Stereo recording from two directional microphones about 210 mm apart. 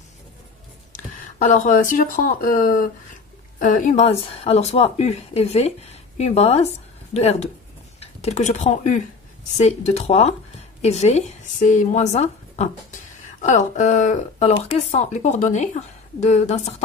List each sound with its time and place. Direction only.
0.9 s a woman's voice: 35° left (ahead or behind)